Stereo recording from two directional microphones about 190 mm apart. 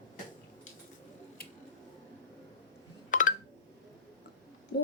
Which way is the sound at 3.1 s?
40° left (ahead or behind).